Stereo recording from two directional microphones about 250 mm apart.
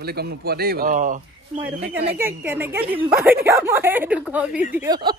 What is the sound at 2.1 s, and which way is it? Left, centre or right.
A woman's voice, centre.